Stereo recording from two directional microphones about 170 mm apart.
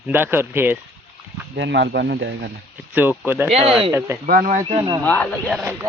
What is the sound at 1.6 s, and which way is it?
Speech, 90° right.